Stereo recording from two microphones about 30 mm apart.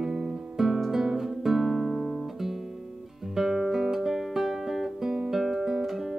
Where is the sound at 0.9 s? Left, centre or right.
Centre.